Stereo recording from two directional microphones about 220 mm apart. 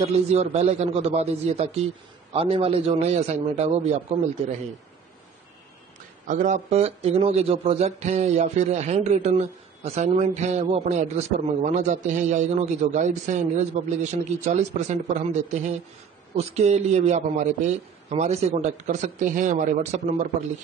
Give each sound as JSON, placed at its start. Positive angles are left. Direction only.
{"t": 0.0, "sound": "a man's voice", "side_deg": -30}
{"t": 6.2, "sound": "speech", "side_deg": -35}